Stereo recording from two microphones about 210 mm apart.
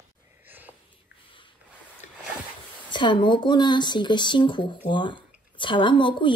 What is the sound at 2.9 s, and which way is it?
Speech, 20° left (ahead or behind).